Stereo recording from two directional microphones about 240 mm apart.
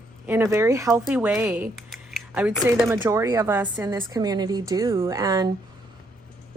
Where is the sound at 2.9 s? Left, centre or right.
Centre.